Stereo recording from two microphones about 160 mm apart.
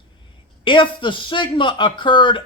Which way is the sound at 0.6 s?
30° left (ahead or behind).